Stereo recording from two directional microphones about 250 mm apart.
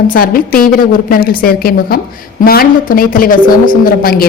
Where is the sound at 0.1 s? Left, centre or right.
Left.